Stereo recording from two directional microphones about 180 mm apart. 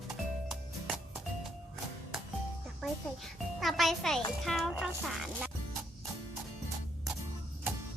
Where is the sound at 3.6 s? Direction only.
Centre (ahead or behind).